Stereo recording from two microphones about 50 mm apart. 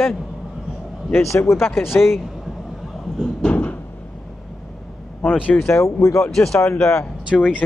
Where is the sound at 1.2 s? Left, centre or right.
Left.